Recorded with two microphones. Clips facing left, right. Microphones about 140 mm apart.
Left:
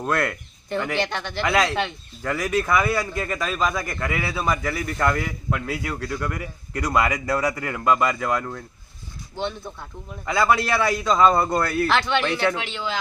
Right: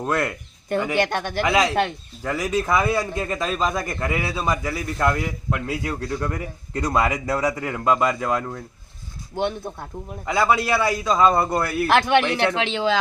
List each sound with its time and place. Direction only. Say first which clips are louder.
0.0 s a man's voice: even; 15° right (ahead or behind)
0.9 s speech: right 4 dB; 50° right (ahead or behind)
1.4 s a man's voice: right 2 dB; 15° right (ahead or behind)
9.4 s speech: right 4 dB; 50° right (ahead or behind)
10.2 s a man's voice: even; 15° right (ahead or behind)
11.9 s speech: right 4 dB; 50° right (ahead or behind)
12.2 s a man's voice: right 1 dB; 15° right (ahead or behind)
12.5 s speech: right 7 dB; 90° right